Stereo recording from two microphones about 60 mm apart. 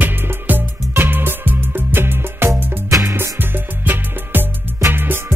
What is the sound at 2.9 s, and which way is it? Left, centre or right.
Music, right.